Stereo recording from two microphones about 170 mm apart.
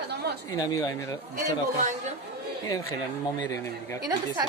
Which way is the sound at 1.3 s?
55° right (ahead or behind).